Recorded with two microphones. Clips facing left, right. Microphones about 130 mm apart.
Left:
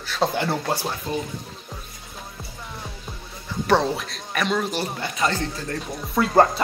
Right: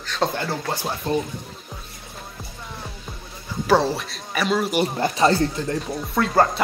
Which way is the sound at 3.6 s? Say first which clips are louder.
Right 1 dB; centre (ahead or behind).